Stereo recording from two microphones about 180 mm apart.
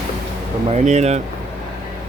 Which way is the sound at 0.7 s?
40° right (ahead or behind).